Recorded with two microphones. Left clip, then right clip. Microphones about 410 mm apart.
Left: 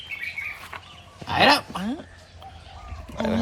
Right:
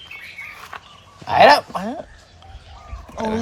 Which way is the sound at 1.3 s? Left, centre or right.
Centre.